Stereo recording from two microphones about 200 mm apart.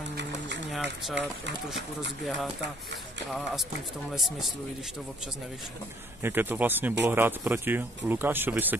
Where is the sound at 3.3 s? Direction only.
Centre (ahead or behind).